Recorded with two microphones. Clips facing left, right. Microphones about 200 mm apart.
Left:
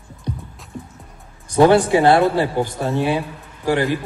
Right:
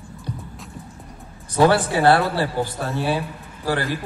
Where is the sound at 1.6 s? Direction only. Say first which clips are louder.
Left 4 dB; 15° left (ahead or behind).